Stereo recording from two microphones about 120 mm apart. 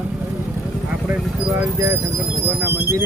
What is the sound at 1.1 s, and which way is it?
Speech, 20° right (ahead or behind).